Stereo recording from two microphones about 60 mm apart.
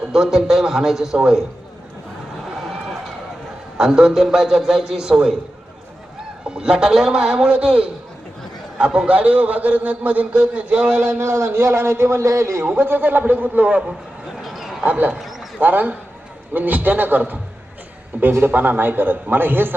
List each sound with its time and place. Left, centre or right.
0.1 s a man's voice: centre
3.8 s a man's voice: centre
6.4 s a man's voice: centre
11.0 s a man's voice: right
12.6 s a man's voice: right
14.4 s a sound: centre
14.8 s a man's voice: right
15.2 s a sound: centre
15.6 s a man's voice: right